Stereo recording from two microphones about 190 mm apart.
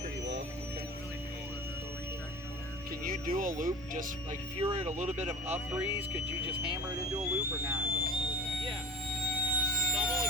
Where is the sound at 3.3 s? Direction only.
45° right (ahead or behind).